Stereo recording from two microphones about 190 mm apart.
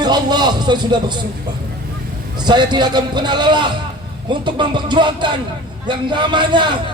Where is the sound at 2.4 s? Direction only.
25° right (ahead or behind).